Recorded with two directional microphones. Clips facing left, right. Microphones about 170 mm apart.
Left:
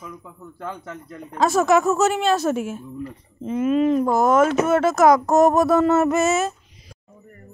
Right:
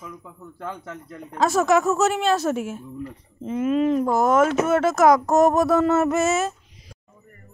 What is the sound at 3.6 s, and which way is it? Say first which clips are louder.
Speech: left 2 dB; 20° left (ahead or behind).